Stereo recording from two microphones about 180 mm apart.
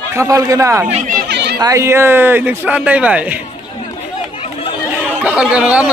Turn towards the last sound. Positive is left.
turn(degrees=-5)  # may be behind; listen again after turning